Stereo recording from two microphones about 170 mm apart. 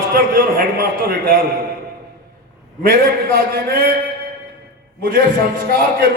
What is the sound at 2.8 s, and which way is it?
Speech, 65° right (ahead or behind).